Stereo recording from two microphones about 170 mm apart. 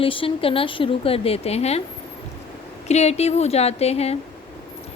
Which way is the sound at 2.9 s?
40° left (ahead or behind).